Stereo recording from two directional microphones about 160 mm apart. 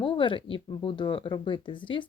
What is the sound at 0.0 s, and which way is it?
Speech, 30° left (ahead or behind).